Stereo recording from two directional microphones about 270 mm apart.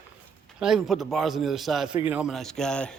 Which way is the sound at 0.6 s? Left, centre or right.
Centre.